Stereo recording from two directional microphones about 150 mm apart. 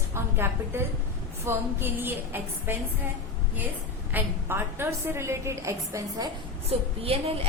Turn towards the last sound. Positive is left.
turn(degrees=-40)  # may be behind; listen again after turning